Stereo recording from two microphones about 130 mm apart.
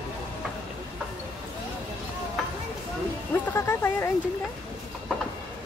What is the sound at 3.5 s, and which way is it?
Speech, 20° left (ahead or behind).